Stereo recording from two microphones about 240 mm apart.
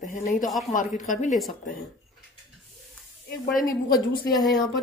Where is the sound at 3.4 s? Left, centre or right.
Left.